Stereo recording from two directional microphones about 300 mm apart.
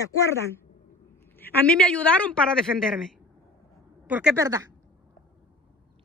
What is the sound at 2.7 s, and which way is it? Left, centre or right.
Speech, centre.